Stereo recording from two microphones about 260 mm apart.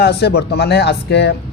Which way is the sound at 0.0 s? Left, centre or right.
Left.